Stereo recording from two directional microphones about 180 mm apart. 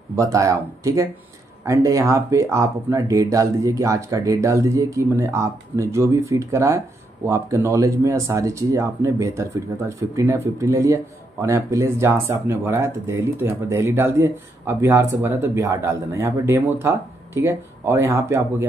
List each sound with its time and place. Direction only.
0.1 s speech: 15° right (ahead or behind)